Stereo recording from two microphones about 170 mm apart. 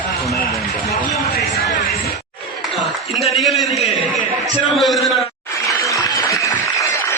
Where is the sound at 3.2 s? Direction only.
Centre (ahead or behind).